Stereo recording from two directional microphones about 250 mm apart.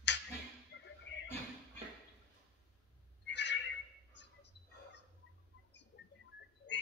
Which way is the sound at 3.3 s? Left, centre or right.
Left.